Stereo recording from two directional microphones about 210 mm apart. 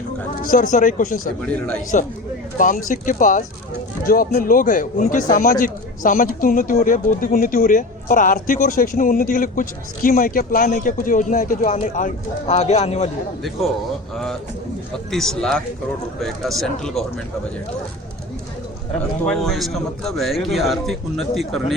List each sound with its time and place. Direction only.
0.4 s a man's voice: 40° left (ahead or behind)
1.4 s a man's voice: 5° left (ahead or behind)
2.6 s a man's voice: 40° left (ahead or behind)
15.1 s a man's voice: centre (ahead or behind)
19.2 s a man's voice: centre (ahead or behind)